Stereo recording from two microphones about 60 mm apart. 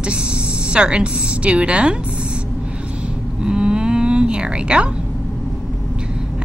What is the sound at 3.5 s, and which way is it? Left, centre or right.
Cattle, centre.